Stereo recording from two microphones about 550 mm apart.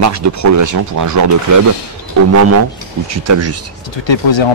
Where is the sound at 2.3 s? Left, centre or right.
Right.